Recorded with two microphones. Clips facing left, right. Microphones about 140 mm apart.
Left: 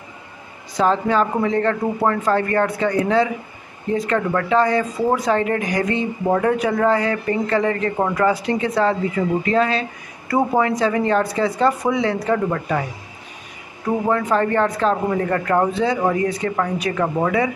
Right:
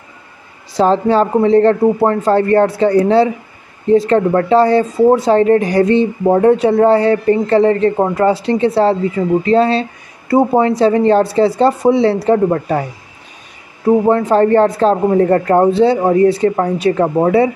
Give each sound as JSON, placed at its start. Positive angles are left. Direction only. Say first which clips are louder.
{"t": 0.7, "sound": "speech", "louder": "right 6 dB", "side_deg": -30}
{"t": 13.8, "sound": "speech", "louder": "right 8 dB", "side_deg": -30}